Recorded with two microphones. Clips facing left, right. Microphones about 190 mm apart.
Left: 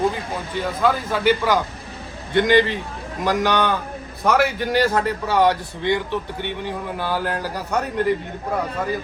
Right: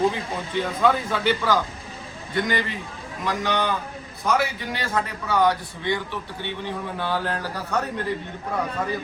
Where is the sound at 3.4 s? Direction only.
65° left (ahead or behind).